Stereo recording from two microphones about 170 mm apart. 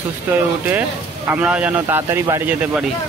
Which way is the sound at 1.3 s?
10° right (ahead or behind).